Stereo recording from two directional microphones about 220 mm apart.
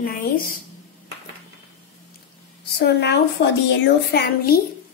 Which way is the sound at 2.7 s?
50° left (ahead or behind).